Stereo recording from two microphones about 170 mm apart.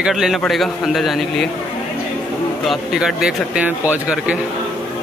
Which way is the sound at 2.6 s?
5° right (ahead or behind).